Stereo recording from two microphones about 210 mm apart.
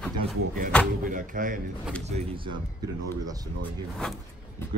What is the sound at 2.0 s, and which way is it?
Speech, 25° right (ahead or behind).